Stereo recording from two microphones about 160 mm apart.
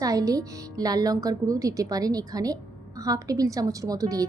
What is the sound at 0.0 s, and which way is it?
A woman's voice, 20° right (ahead or behind).